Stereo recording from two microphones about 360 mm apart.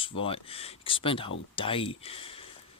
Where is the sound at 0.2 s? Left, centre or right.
Centre.